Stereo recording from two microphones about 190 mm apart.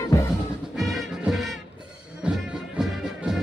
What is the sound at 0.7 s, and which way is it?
Music, centre (ahead or behind).